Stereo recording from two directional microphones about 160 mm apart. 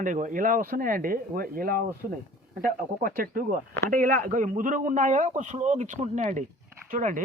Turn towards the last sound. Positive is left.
turn(degrees=-55)  # may be behind; listen again after turning